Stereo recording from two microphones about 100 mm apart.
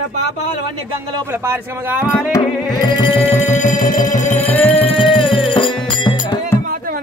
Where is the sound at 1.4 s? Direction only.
20° right (ahead or behind).